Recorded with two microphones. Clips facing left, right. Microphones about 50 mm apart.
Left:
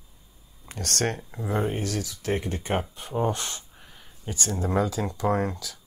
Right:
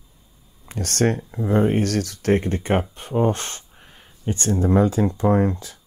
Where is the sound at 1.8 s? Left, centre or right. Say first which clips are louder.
Right 8 dB; right.